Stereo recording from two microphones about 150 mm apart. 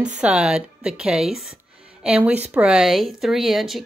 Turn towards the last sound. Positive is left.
turn(degrees=0)  # may be behind; listen again after turning